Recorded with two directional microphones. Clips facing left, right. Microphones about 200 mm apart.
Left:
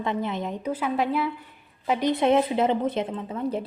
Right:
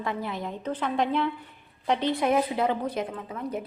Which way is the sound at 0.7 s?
5° left (ahead or behind).